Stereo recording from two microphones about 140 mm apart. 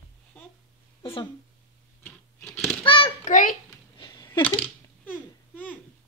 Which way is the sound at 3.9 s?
35° left (ahead or behind).